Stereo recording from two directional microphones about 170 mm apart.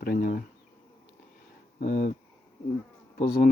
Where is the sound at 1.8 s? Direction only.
55° left (ahead or behind).